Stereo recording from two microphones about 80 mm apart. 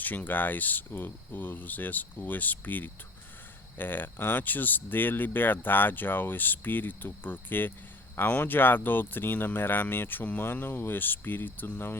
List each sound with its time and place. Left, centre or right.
0.0 s speech: left